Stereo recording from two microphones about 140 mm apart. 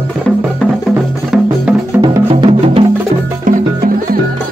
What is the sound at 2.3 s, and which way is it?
Music, 45° right (ahead or behind).